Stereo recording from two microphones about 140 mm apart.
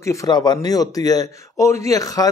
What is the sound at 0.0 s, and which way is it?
A man's voice, 20° left (ahead or behind).